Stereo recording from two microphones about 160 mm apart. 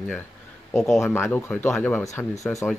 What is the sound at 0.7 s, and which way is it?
Speech, centre (ahead or behind).